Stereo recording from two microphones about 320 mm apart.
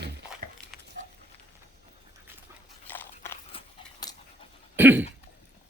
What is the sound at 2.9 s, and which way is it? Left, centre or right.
Biting, centre.